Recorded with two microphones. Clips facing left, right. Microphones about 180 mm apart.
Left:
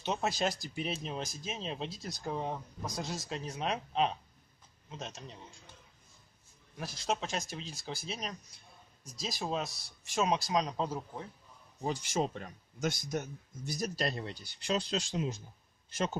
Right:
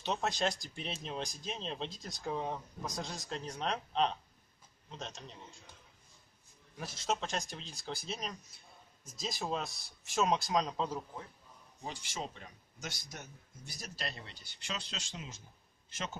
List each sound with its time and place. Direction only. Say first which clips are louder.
0.0 s speech: left 1 dB; 5° left (ahead or behind)
6.8 s speech: left 1 dB; centre (ahead or behind)
11.8 s a man's voice: left 9 dB; 45° left (ahead or behind)